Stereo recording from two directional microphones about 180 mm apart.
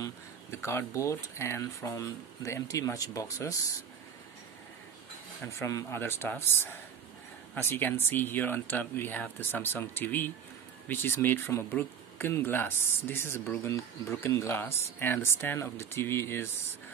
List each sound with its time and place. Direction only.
0.0 s speech: 15° left (ahead or behind)
5.5 s speech: 15° left (ahead or behind)